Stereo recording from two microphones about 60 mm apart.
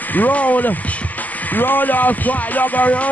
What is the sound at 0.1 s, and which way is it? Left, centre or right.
Speech, left.